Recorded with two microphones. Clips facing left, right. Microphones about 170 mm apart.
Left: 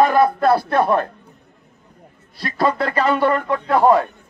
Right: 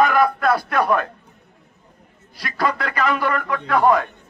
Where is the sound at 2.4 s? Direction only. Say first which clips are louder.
Left 4 dB; 30° left (ahead or behind).